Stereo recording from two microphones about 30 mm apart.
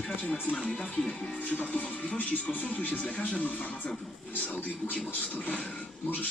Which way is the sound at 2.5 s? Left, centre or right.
Left.